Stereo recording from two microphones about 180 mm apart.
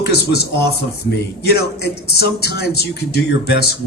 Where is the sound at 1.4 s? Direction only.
65° left (ahead or behind).